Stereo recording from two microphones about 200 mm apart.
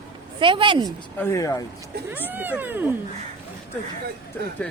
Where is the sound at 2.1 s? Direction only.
10° right (ahead or behind).